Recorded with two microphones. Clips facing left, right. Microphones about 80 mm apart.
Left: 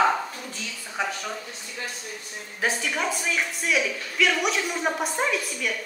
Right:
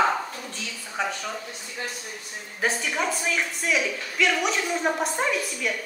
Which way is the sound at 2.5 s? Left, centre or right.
Centre.